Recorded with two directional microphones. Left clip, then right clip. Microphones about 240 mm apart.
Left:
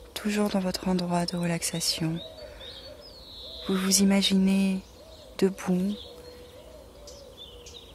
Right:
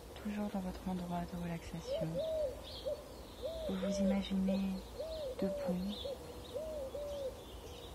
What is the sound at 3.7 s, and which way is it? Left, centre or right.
Speech, left.